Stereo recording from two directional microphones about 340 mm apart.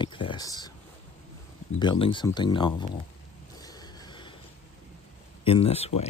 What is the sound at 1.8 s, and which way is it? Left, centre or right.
Speech, centre.